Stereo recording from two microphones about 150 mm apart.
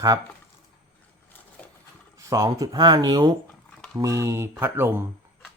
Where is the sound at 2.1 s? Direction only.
20° right (ahead or behind).